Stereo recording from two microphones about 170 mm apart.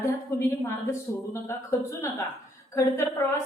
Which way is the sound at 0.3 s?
15° left (ahead or behind).